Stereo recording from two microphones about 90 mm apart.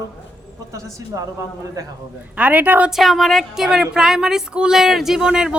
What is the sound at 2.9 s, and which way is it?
Speech, centre (ahead or behind).